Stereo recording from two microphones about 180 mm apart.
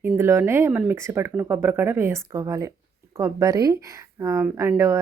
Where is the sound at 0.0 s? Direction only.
15° right (ahead or behind).